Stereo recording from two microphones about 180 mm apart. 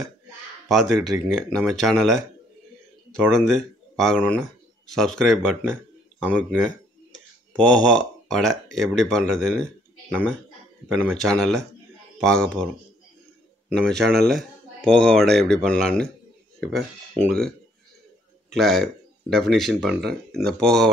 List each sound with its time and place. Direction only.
0.7 s speech: centre (ahead or behind)
3.3 s speech: 5° left (ahead or behind)
7.5 s speech: 5° left (ahead or behind)
11.1 s speech: centre (ahead or behind)
13.7 s speech: 5° left (ahead or behind)